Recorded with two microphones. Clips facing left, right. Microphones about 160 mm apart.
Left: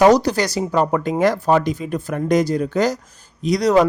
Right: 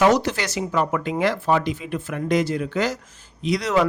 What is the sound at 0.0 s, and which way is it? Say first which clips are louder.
Speech: left 5 dB; 40° left (ahead or behind).